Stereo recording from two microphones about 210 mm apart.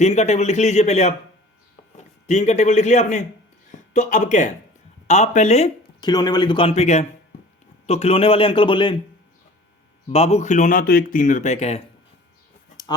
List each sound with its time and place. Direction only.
0.0 s a man's voice: 30° left (ahead or behind)
10.1 s speech: 30° left (ahead or behind)